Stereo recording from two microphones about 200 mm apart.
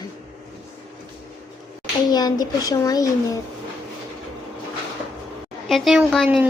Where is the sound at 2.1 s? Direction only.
20° left (ahead or behind).